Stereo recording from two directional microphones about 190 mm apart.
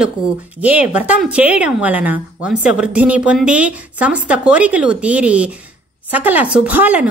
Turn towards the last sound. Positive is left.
turn(degrees=-10)  # may be behind; listen again after turning